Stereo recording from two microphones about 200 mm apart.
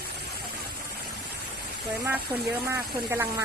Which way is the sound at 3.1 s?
10° right (ahead or behind).